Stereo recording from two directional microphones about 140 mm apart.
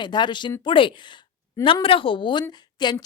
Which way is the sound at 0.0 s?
35° left (ahead or behind).